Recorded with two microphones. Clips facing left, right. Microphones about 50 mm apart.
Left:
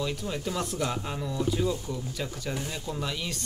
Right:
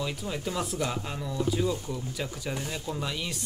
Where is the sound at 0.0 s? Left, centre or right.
Centre.